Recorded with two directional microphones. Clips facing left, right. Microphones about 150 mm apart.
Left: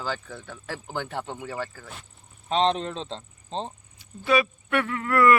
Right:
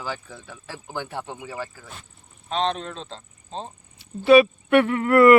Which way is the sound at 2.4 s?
30° left (ahead or behind).